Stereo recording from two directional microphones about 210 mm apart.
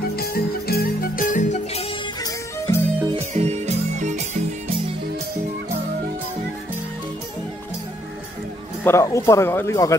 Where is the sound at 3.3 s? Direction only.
30° right (ahead or behind).